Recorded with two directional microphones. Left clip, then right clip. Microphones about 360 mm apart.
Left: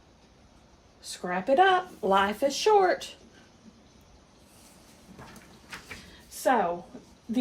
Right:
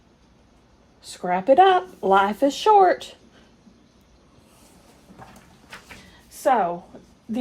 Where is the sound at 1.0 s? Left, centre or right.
Right.